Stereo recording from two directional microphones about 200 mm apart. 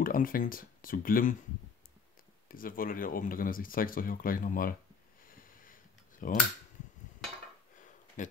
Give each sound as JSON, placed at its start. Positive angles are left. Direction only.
{"t": 0.0, "sound": "speech", "side_deg": 45}
{"t": 2.4, "sound": "speech", "side_deg": 45}
{"t": 5.3, "sound": "a sound", "side_deg": 45}
{"t": 8.2, "sound": "speech", "side_deg": 40}